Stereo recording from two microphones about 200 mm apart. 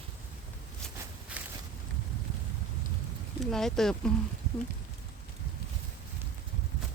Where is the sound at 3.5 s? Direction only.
Centre (ahead or behind).